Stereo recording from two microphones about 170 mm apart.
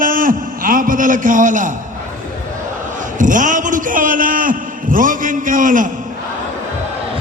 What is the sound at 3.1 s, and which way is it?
A man's voice, 50° right (ahead or behind).